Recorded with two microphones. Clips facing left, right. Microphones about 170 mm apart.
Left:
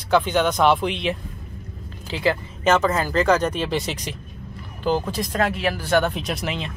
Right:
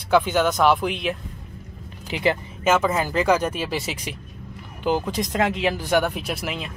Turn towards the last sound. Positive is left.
turn(degrees=-5)  # may be behind; listen again after turning